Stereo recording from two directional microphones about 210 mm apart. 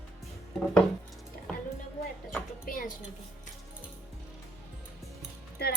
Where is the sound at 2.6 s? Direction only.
40° left (ahead or behind).